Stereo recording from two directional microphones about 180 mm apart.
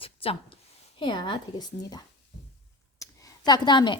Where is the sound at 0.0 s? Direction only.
30° left (ahead or behind).